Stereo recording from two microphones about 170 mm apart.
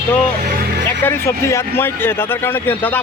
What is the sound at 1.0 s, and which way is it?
A man's voice, 15° left (ahead or behind).